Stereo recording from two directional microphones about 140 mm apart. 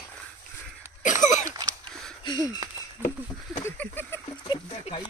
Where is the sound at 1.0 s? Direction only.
65° left (ahead or behind).